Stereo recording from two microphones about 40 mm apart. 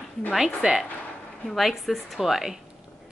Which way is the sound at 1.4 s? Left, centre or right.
Centre.